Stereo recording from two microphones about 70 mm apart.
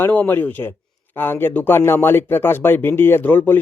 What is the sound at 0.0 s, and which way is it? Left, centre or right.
Speech, left.